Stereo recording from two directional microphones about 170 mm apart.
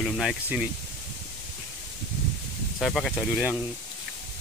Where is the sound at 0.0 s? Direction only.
Centre (ahead or behind).